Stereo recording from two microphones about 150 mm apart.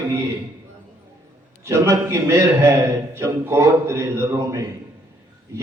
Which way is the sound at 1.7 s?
20° right (ahead or behind).